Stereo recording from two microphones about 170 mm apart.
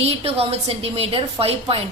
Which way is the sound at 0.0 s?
35° right (ahead or behind).